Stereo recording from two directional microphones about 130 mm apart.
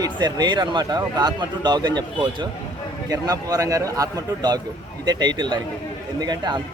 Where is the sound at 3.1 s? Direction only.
25° right (ahead or behind).